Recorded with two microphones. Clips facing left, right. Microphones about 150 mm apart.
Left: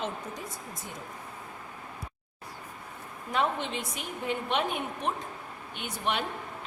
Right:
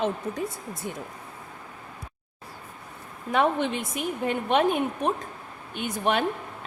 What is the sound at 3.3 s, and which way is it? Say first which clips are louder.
A woman's voice: right 6 dB; 55° right (ahead or behind).